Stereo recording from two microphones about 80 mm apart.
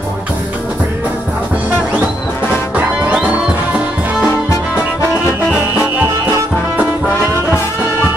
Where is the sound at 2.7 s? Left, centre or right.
Centre.